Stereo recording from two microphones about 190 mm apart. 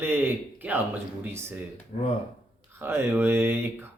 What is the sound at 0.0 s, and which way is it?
A man's voice, 10° right (ahead or behind).